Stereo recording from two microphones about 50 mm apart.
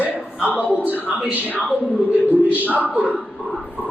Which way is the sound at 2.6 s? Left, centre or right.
Right.